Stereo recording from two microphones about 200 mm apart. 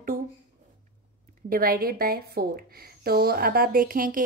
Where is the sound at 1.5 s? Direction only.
45° right (ahead or behind).